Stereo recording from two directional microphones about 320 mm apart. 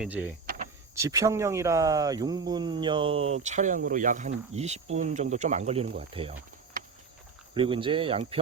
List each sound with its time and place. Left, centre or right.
0.0 s speech: centre
0.4 s power windows: right
0.9 s speech: centre
7.5 s speech: centre